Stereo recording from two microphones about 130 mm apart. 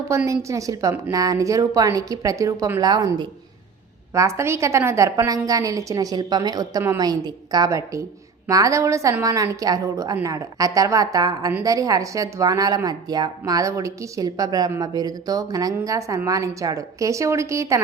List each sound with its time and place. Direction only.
0.3 s a woman's voice: 25° right (ahead or behind)